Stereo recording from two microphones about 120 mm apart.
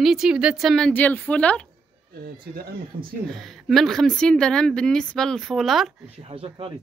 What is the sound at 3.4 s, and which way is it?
Speech, centre (ahead or behind).